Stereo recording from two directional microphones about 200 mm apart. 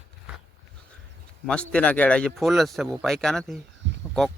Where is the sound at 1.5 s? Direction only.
5° left (ahead or behind).